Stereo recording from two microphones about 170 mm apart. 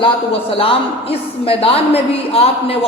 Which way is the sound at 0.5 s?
35° left (ahead or behind).